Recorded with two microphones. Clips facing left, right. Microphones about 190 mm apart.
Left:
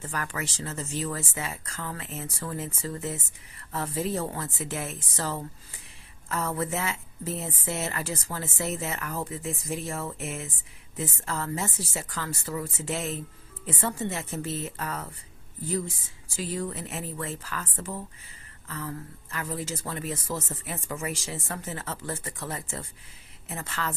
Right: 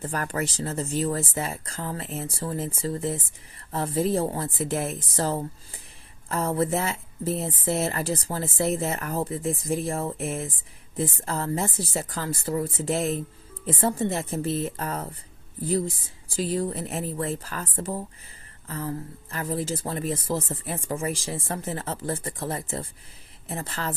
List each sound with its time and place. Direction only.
0.0 s speech: 40° right (ahead or behind)
16.3 s speech: 35° right (ahead or behind)